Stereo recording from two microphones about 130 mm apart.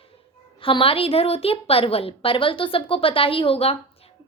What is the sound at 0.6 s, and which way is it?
A woman's voice, 45° left (ahead or behind).